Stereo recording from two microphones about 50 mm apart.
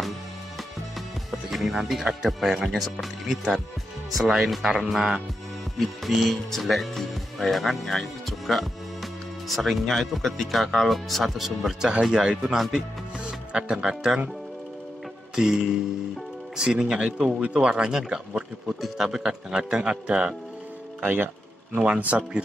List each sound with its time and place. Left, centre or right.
0.9 s speech: centre
15.3 s speech: centre
18.7 s speech: centre; by 20.2 s right
21.0 s speech: right
21.7 s speech: right